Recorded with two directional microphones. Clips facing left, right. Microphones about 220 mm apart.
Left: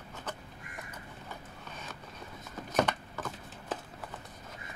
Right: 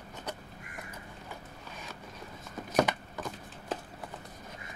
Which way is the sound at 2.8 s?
10° right (ahead or behind).